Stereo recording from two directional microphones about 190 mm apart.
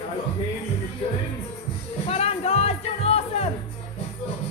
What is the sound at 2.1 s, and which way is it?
Music, 30° left (ahead or behind).